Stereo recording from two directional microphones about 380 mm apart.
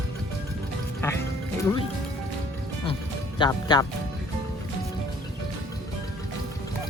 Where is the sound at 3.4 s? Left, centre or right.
Centre.